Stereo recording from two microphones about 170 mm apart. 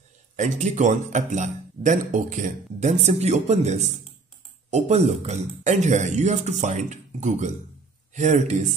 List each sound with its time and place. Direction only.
0.4 s speech: 45° right (ahead or behind)